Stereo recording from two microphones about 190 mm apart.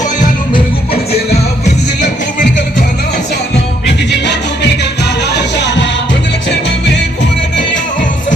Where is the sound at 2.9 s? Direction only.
60° left (ahead or behind).